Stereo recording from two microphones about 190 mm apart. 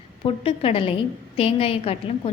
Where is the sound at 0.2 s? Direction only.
30° left (ahead or behind).